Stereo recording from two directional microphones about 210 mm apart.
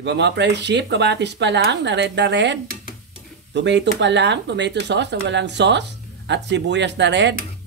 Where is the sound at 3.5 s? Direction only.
55° right (ahead or behind).